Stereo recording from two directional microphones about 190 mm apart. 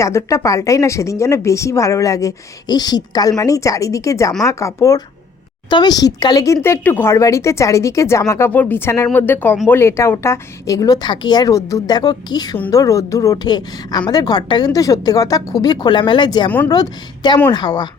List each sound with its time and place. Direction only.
0.0 s a woman's voice: 15° left (ahead or behind)